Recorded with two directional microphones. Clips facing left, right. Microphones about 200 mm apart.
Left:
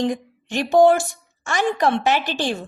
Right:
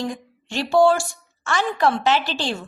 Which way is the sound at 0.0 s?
20° left (ahead or behind).